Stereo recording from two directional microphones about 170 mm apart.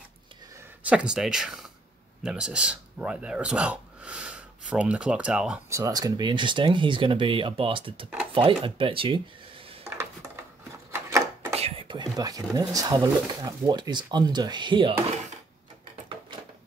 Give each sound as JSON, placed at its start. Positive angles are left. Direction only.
{"t": 0.8, "sound": "speech", "side_deg": -5}
{"t": 5.7, "sound": "speech", "side_deg": -20}
{"t": 9.8, "sound": "a sound", "side_deg": -15}
{"t": 11.5, "sound": "speech", "side_deg": -35}